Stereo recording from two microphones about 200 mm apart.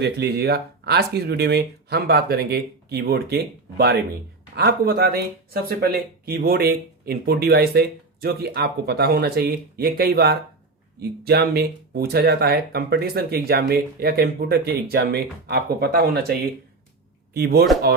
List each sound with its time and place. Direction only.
0.0 s speech: 55° right (ahead or behind)
17.3 s speech: 50° right (ahead or behind)